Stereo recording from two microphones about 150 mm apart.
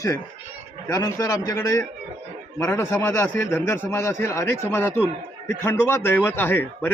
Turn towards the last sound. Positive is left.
turn(degrees=15)  # may be behind; listen again after turning